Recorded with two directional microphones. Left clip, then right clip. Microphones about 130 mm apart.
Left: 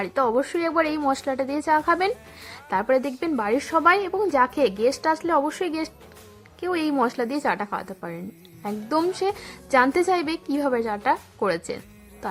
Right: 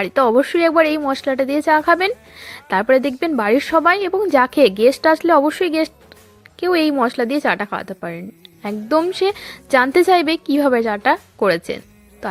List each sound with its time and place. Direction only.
0.0 s a woman's voice: 25° right (ahead or behind)